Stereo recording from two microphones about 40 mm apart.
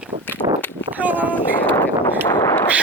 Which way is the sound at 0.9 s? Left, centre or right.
Right.